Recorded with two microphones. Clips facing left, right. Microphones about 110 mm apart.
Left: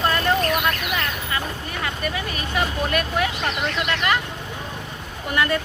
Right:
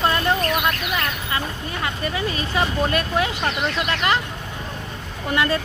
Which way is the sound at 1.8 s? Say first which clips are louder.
Right 2 dB; 30° right (ahead or behind).